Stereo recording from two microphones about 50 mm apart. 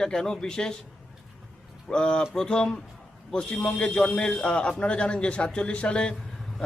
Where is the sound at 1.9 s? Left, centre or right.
Centre.